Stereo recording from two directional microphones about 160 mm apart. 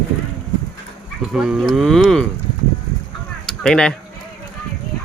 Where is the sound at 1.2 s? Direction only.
5° right (ahead or behind).